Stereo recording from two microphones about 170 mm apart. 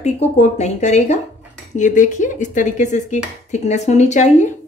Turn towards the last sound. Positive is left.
turn(degrees=45)  # may be behind; listen again after turning